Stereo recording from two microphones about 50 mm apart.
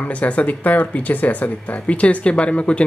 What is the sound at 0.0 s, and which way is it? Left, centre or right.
Speech, left.